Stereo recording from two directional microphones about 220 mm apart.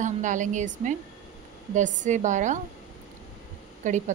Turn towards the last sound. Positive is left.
turn(degrees=-35)  # may be behind; listen again after turning